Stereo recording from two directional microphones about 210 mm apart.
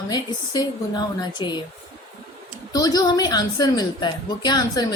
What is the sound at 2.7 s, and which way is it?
Speech, 20° left (ahead or behind).